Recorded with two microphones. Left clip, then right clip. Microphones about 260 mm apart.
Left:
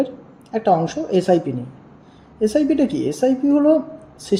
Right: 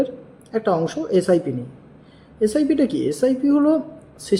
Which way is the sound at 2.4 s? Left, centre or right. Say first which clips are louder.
Left 1 dB; centre.